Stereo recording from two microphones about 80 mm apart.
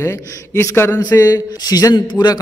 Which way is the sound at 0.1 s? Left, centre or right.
Left.